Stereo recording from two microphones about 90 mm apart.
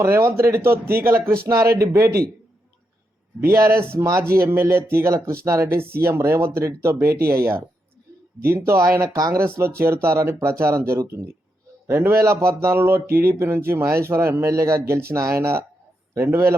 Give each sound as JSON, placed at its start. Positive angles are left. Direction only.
{"t": 0.0, "sound": "speech", "side_deg": -30}
{"t": 3.5, "sound": "speech", "side_deg": -35}
{"t": 9.5, "sound": "speech", "side_deg": -30}